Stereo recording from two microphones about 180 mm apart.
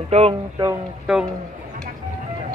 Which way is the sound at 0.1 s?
35° right (ahead or behind).